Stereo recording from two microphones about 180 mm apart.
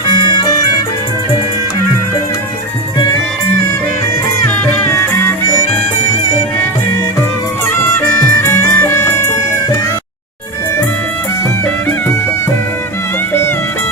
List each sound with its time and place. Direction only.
4.9 s music: 15° left (ahead or behind)
7.8 s music: 15° left (ahead or behind)